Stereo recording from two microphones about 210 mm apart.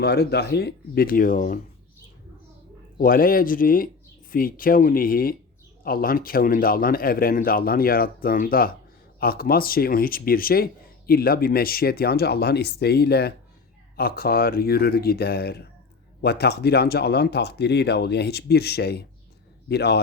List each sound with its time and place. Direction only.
0.0 s speech: 50° left (ahead or behind)
3.0 s speech: 45° left (ahead or behind)